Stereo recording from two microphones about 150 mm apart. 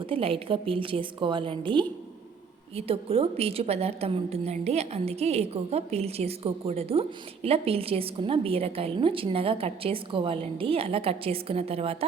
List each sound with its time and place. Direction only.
0.0 s a woman's voice: 35° right (ahead or behind)